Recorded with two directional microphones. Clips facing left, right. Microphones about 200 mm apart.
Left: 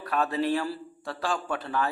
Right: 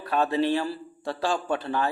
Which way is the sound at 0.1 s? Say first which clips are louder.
Right 3 dB; 25° right (ahead or behind).